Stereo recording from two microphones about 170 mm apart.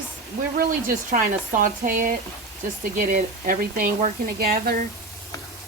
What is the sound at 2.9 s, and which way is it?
Speech, 55° right (ahead or behind).